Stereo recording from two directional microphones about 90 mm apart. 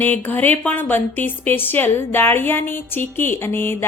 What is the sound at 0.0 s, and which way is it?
A woman's voice, 20° left (ahead or behind).